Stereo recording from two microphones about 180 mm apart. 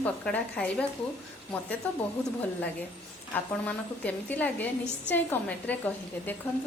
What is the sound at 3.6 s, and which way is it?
A woman's voice, 10° left (ahead or behind).